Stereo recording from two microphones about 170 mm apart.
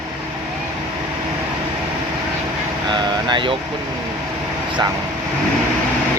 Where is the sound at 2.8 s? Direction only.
25° right (ahead or behind).